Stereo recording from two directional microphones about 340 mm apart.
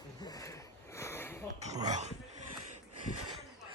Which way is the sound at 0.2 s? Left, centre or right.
Centre.